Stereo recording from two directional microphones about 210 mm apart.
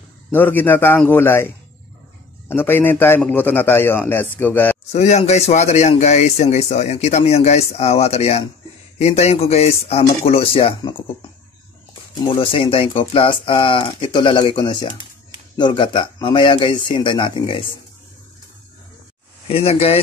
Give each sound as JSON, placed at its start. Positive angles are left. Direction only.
{"t": 0.3, "sound": "a man's voice", "side_deg": 10}
{"t": 2.5, "sound": "a man's voice", "side_deg": 10}
{"t": 4.9, "sound": "speech", "side_deg": 35}
{"t": 12.2, "sound": "speech", "side_deg": 25}
{"t": 19.4, "sound": "speech", "side_deg": 30}